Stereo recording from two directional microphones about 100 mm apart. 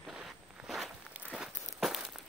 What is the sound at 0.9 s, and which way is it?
Walk, 10° right (ahead or behind).